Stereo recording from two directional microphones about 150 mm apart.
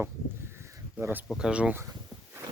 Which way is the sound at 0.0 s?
15° right (ahead or behind).